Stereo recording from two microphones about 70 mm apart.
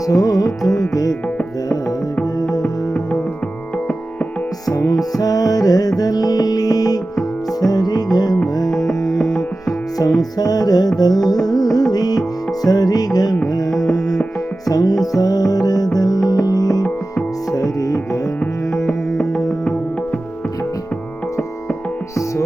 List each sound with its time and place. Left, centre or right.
0.0 s music: left
2.5 s music: centre
4.6 s music: left
8.7 s music: centre
10.2 s music: left
14.7 s music: left
18.7 s music: centre